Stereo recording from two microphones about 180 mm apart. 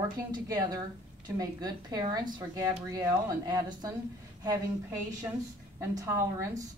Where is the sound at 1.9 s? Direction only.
25° right (ahead or behind).